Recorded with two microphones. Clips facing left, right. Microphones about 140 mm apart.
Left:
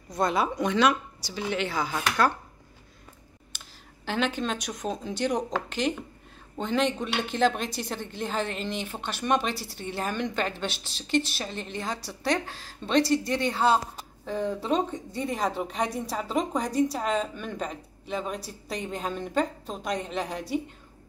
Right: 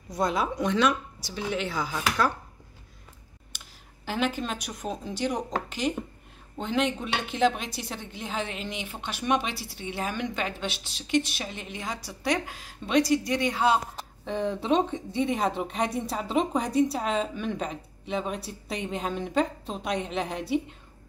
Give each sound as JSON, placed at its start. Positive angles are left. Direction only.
{"t": 0.1, "sound": "a woman's voice", "side_deg": 0}
{"t": 3.5, "sound": "a woman's voice", "side_deg": -5}
{"t": 9.4, "sound": "speech", "side_deg": 40}
{"t": 9.9, "sound": "a woman's voice", "side_deg": -5}
{"t": 10.7, "sound": "speech", "side_deg": 35}
{"t": 11.4, "sound": "a woman's voice", "side_deg": -5}